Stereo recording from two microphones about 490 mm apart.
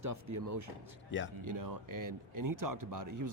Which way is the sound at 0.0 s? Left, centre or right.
Right.